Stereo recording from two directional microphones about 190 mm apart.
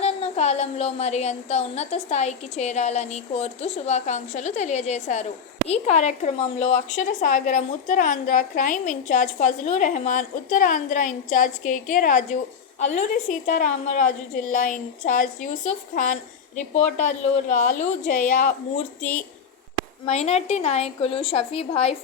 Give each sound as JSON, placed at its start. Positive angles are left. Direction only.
{"t": 0.0, "sound": "a woman's voice", "side_deg": 35}
{"t": 20.1, "sound": "a woman's voice", "side_deg": 35}